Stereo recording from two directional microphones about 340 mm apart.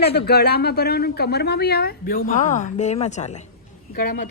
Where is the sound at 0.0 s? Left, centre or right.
Left.